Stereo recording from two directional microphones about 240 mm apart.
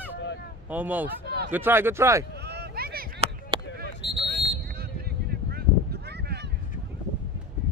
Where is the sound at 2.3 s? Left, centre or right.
Right.